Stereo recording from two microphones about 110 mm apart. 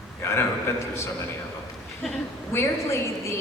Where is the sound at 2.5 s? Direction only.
25° left (ahead or behind).